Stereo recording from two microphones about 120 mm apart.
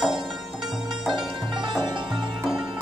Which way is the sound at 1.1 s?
40° right (ahead or behind).